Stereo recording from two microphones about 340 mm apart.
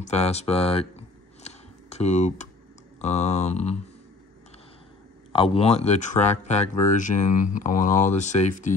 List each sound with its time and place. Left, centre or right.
0.0 s a sound: centre
3.0 s speech: centre
5.3 s speech: centre